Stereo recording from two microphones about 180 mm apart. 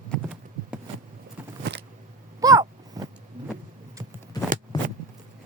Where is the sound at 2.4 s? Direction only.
20° right (ahead or behind).